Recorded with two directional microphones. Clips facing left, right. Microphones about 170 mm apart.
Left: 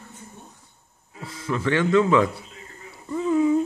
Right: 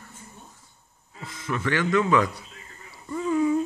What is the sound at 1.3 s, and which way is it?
Speech, 30° left (ahead or behind).